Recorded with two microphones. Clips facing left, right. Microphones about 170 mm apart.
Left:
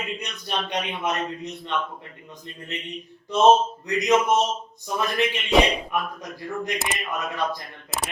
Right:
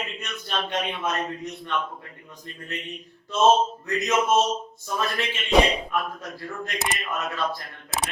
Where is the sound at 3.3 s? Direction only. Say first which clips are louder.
Left 2 dB; 15° left (ahead or behind).